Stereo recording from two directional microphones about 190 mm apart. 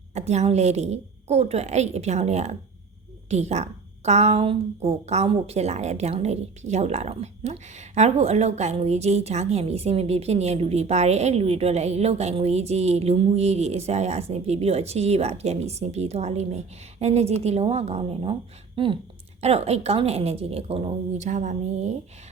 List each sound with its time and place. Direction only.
0.1 s a woman's voice: 35° right (ahead or behind)